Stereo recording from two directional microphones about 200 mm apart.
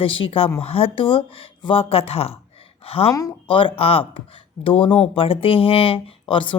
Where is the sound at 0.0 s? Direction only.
25° left (ahead or behind).